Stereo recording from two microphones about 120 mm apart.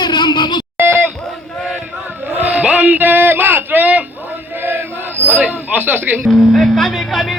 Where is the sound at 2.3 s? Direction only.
15° right (ahead or behind).